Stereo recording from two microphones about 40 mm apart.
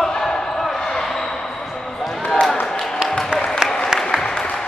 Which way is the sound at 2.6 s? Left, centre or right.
Centre.